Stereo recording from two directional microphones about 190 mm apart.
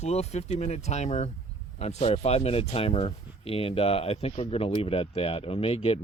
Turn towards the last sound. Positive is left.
turn(degrees=30)  # may be behind; listen again after turning